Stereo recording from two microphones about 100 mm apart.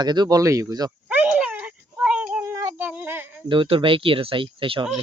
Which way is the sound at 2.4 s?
30° right (ahead or behind).